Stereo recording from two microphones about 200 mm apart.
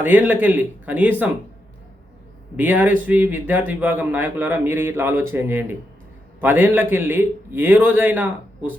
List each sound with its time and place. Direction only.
0.0 s a man's voice: 10° right (ahead or behind)
2.6 s a man's voice: 5° right (ahead or behind)